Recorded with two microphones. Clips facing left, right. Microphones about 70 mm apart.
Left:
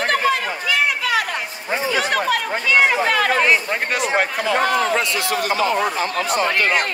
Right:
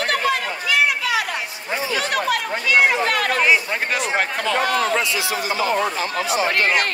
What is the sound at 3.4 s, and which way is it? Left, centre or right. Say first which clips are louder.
Speech: even; centre.